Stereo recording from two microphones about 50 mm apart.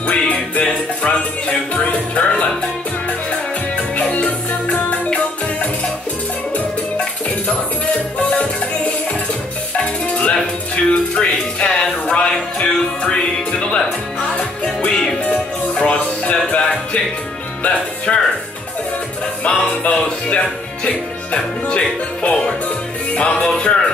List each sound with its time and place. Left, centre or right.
0.0 s music: left
0.7 s music: centre
1.7 s speech: left
3.7 s music: left
8.2 s music: left
15.2 s music: left
17.6 s music: centre
19.8 s speech: left